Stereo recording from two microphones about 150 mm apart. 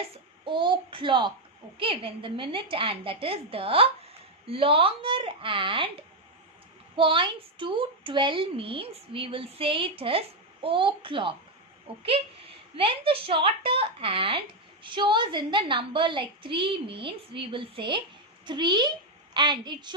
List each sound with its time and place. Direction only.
0.1 s a woman's voice: 35° right (ahead or behind)